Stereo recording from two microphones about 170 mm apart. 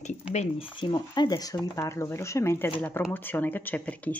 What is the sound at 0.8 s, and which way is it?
Speech, 25° left (ahead or behind).